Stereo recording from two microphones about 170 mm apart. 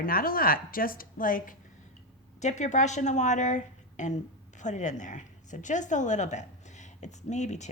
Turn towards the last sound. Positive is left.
turn(degrees=45)  # may be behind; listen again after turning